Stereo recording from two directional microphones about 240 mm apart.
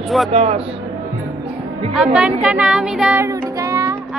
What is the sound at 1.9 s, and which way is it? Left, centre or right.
Child singing, centre.